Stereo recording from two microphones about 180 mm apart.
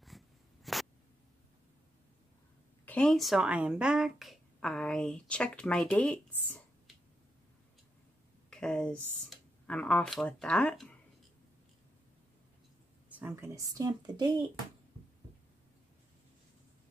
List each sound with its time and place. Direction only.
0.7 s a sound: centre (ahead or behind)
2.8 s speech: 5° left (ahead or behind)
8.5 s speech: 5° left (ahead or behind)
13.1 s speech: 15° right (ahead or behind)